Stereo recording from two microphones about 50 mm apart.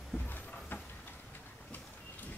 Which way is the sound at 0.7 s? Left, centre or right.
Left.